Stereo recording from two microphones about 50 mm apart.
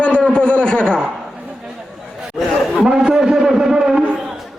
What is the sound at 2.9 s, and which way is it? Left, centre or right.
A man's voice, centre.